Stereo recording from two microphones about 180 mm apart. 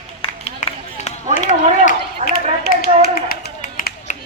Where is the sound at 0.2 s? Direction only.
35° left (ahead or behind).